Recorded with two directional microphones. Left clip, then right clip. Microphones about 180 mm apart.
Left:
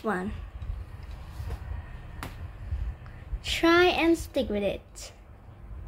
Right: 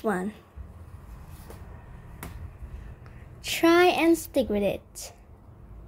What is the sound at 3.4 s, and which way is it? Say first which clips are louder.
A woman's voice: right 2 dB; 35° right (ahead or behind).